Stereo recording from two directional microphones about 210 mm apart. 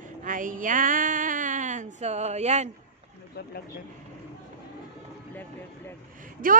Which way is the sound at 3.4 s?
50° left (ahead or behind).